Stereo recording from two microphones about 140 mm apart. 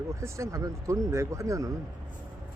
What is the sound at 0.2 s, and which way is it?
Speech, 20° right (ahead or behind).